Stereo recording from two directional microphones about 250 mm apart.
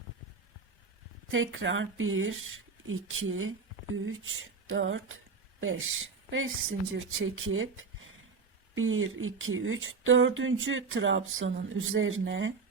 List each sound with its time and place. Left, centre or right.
1.3 s speech: right